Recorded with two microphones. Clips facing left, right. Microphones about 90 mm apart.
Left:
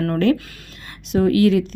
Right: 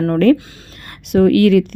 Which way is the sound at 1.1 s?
60° right (ahead or behind).